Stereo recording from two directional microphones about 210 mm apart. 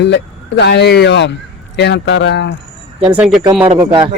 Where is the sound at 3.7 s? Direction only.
20° right (ahead or behind).